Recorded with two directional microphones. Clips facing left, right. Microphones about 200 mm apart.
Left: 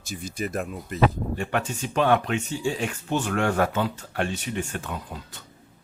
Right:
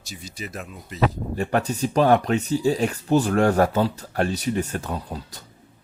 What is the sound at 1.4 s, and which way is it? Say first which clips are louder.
Speech: right 7 dB; 40° right (ahead or behind).